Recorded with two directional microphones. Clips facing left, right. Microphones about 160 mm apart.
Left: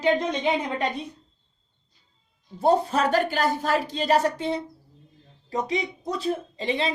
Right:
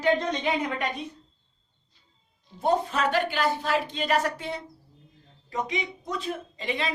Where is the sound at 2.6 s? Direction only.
35° left (ahead or behind).